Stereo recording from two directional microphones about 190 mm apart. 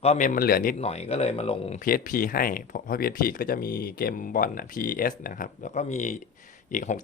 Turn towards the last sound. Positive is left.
turn(degrees=40)  # may be behind; listen again after turning